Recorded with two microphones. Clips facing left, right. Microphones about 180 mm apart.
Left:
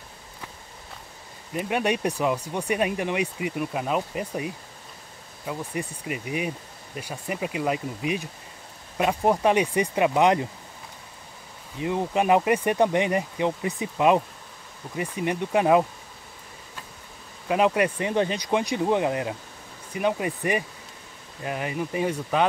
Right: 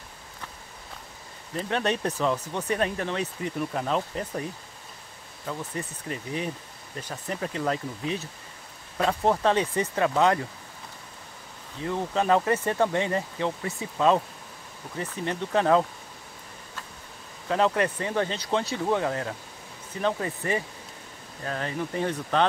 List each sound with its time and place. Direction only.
1.5 s speech: 10° left (ahead or behind)
11.8 s speech: 15° left (ahead or behind)
17.5 s speech: 15° left (ahead or behind)